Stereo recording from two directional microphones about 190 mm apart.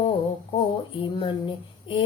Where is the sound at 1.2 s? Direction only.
25° left (ahead or behind).